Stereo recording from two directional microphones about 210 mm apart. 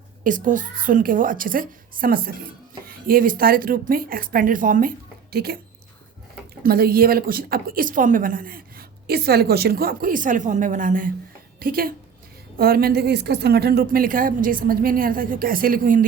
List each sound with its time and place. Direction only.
0.3 s a woman's voice: 40° right (ahead or behind)
6.6 s a woman's voice: 45° right (ahead or behind)